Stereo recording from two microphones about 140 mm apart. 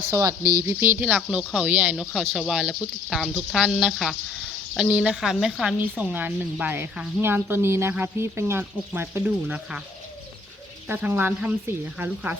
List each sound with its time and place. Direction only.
0.1 s speech: 20° right (ahead or behind); by 5.7 s centre (ahead or behind)
5.8 s speech: 10° right (ahead or behind)
10.8 s speech: 15° right (ahead or behind)